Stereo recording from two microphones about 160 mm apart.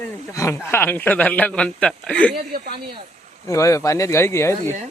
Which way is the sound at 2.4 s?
75° right (ahead or behind).